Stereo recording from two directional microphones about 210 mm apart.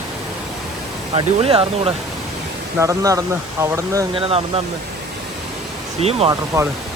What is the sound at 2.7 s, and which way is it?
Speech, 15° right (ahead or behind).